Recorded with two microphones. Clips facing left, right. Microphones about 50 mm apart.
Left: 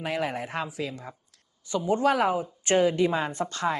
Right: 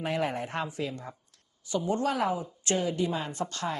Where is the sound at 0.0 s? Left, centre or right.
Centre.